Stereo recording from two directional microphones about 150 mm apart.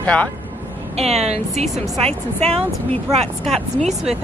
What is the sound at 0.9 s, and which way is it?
Speech, 45° right (ahead or behind).